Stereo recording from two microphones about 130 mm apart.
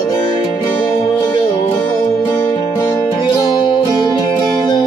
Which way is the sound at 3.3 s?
35° left (ahead or behind).